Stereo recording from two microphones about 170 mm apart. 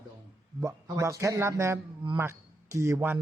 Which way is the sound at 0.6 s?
20° right (ahead or behind).